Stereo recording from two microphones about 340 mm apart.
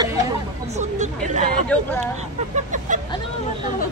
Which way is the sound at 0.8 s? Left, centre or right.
Right.